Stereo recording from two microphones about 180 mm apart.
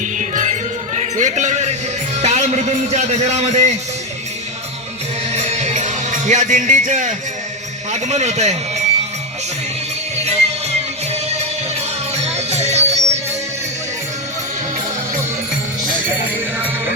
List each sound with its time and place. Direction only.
0.0 s music: 45° right (ahead or behind)
0.9 s a sound: 40° right (ahead or behind)
2.1 s a man's voice: 40° right (ahead or behind)
5.3 s music: 35° right (ahead or behind)
7.9 s a man's voice: 40° right (ahead or behind)
10.2 s music: 35° right (ahead or behind)